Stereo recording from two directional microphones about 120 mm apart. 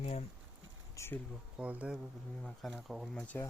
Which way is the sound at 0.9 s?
20° left (ahead or behind).